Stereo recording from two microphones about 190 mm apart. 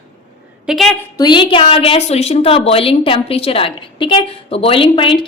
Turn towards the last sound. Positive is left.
turn(degrees=30)  # may be behind; listen again after turning